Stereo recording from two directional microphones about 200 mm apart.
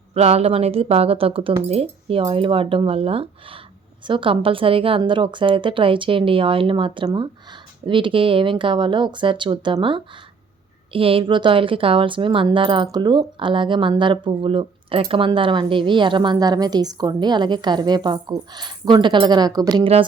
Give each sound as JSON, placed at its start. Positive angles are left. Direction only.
{"t": 0.1, "sound": "a woman's voice", "side_deg": -30}